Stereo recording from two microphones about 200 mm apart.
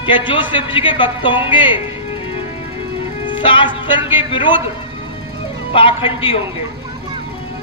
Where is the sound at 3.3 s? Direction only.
25° left (ahead or behind).